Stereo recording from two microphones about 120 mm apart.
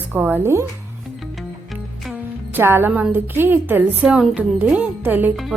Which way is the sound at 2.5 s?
20° right (ahead or behind).